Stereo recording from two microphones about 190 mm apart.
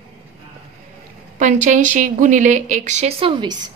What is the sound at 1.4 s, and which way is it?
Speech, 40° right (ahead or behind).